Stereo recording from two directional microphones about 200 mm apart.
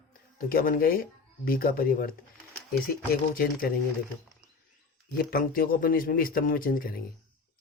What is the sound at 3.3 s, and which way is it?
Speech, 50° left (ahead or behind).